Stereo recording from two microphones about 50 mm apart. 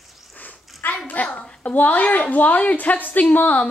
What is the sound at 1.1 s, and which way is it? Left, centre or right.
A child's voice, left.